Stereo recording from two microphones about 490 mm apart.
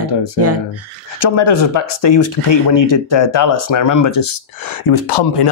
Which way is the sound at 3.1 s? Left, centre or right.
Left.